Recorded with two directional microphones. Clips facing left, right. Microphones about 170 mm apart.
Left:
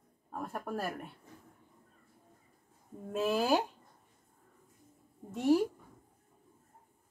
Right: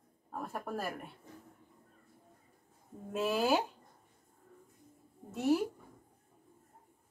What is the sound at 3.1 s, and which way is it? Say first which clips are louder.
Speech: left 1 dB; centre (ahead or behind).